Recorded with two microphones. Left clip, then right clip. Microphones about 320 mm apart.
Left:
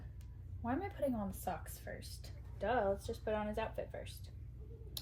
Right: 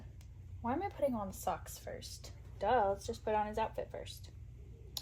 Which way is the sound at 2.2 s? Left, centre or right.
Right.